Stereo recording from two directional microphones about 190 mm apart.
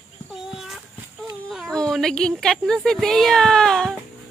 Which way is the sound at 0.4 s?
Centre (ahead or behind).